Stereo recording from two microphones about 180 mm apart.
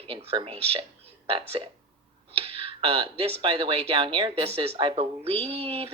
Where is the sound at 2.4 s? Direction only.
30° right (ahead or behind).